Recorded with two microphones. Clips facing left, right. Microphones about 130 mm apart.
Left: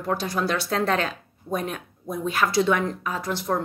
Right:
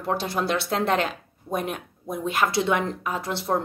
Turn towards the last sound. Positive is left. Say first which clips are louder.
# even
turn(degrees=-25)  # may be behind; listen again after turning